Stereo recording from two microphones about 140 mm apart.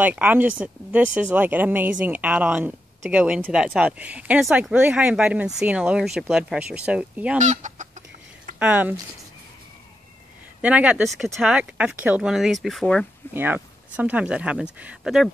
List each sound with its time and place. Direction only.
0.0 s a woman's voice: 10° right (ahead or behind)
7.3 s speech: 60° right (ahead or behind)
8.5 s a woman's voice: 10° right (ahead or behind)
10.6 s a woman's voice: 10° right (ahead or behind)
13.3 s a woman's voice: 15° right (ahead or behind)